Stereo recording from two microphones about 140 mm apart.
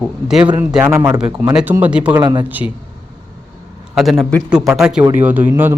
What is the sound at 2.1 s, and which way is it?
Speech, 30° right (ahead or behind).